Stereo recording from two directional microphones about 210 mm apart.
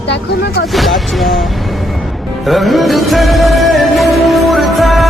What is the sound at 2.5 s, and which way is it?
Music, centre (ahead or behind).